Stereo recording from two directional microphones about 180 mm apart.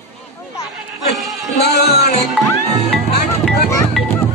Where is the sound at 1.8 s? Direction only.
60° left (ahead or behind).